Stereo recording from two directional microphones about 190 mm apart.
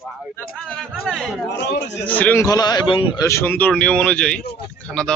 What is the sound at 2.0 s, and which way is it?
A man's voice, 10° left (ahead or behind).